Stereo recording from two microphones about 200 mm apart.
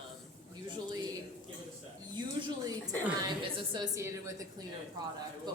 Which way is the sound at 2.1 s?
20° right (ahead or behind).